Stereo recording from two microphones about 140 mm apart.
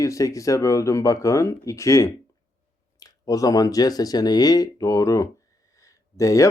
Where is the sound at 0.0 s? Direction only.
20° left (ahead or behind).